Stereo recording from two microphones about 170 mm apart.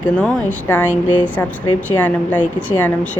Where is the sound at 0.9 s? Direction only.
50° left (ahead or behind).